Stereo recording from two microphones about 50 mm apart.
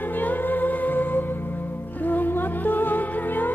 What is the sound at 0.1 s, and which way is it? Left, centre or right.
Music, left.